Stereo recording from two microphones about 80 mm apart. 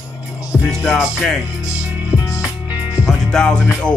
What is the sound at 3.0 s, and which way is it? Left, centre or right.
Music, centre.